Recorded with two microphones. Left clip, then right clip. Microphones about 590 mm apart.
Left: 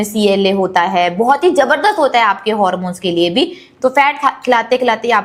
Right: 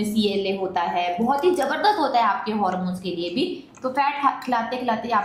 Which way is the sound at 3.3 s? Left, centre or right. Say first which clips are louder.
Left 10 dB; left.